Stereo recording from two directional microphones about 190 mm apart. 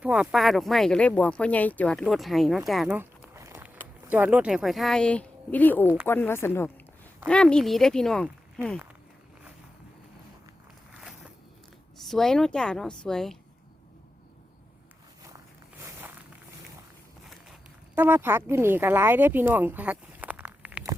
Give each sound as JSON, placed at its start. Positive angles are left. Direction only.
{"t": 0.0, "sound": "a woman's voice", "side_deg": -5}
{"t": 12.0, "sound": "a woman's voice", "side_deg": 0}
{"t": 15.8, "sound": "walk", "side_deg": -10}
{"t": 17.9, "sound": "speech", "side_deg": -10}